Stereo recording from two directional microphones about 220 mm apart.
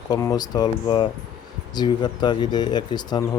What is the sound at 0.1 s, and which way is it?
Speech, 15° left (ahead or behind).